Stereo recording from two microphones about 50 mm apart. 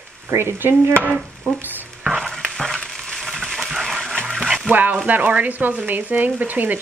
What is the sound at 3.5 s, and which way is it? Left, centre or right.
Dog, centre.